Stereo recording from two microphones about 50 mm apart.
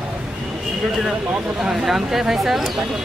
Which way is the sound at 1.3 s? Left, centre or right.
Centre.